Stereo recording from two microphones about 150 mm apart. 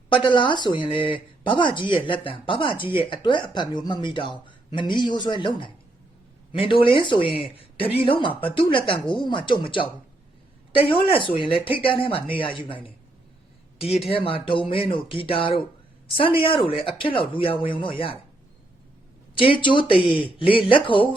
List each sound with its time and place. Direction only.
0.1 s speech: 35° left (ahead or behind)
11.1 s speech: 35° left (ahead or behind)
19.3 s speech: 35° left (ahead or behind)